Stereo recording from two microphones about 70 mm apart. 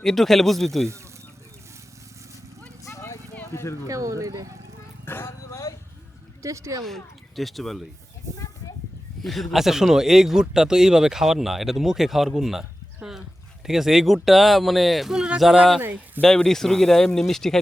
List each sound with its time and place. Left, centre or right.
0.0 s speech: centre
2.8 s vehicle: left
3.5 s speech: left
3.8 s speech: right
5.0 s speech: left
6.4 s speech: right
6.8 s speech: centre
9.2 s speech: centre
15.8 s speech: right
16.2 s speech: centre